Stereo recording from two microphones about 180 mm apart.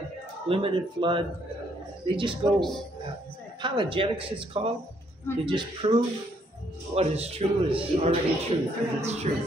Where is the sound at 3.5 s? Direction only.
25° right (ahead or behind).